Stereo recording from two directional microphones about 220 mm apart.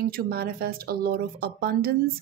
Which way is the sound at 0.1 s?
45° right (ahead or behind).